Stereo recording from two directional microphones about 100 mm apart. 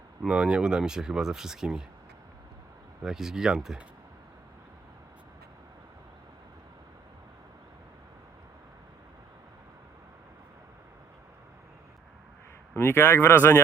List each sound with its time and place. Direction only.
0.2 s speech: 10° right (ahead or behind)
3.0 s speech: 5° right (ahead or behind)
12.7 s speech: 25° left (ahead or behind)